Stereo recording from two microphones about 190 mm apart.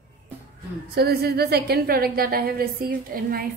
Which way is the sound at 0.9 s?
55° right (ahead or behind).